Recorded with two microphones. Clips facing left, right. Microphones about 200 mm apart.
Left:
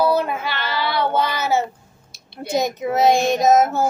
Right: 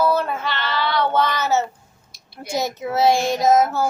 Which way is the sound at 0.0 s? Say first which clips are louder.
Left 1 dB; 10° left (ahead or behind).